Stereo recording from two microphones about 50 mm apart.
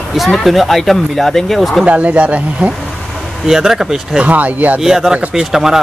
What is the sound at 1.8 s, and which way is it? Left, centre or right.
Speech, right.